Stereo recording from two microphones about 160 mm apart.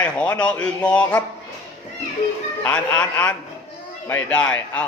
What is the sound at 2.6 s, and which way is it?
A man's voice, 10° left (ahead or behind).